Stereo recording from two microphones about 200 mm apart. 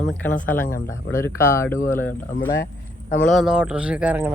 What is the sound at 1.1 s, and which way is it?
Speech, 15° left (ahead or behind).